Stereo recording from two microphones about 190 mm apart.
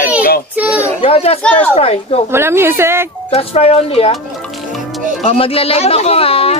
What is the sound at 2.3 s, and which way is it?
Speech, 15° right (ahead or behind).